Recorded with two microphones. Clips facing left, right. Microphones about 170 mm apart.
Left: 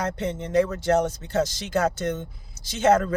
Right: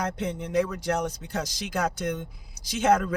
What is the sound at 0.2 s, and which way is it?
Speech, 10° right (ahead or behind).